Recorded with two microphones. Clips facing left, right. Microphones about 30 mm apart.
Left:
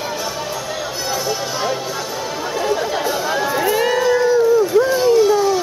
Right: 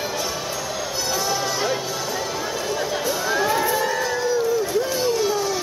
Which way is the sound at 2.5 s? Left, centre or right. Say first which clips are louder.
Left 9 dB; centre.